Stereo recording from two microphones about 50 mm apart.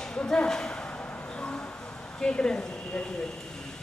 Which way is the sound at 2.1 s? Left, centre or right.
Centre.